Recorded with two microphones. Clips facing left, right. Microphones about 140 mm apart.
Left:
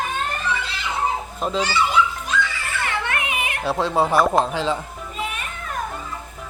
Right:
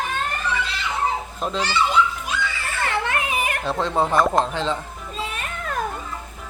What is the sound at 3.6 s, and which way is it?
Speech, 5° left (ahead or behind).